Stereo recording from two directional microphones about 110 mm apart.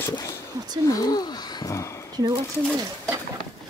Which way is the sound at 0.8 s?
35° left (ahead or behind).